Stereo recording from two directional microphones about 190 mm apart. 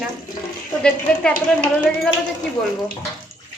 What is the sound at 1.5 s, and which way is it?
Speech, 5° left (ahead or behind).